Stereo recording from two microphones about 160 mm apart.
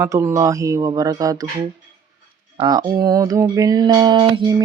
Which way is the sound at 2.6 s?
25° right (ahead or behind).